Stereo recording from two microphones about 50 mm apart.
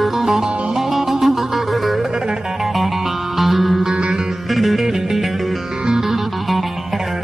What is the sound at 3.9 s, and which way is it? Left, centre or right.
Music, centre.